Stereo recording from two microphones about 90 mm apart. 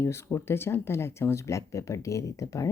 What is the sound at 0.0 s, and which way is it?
Speech, 30° left (ahead or behind).